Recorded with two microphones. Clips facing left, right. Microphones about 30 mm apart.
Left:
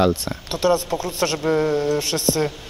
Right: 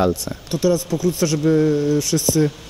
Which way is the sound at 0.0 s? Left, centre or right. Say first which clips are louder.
Even; left.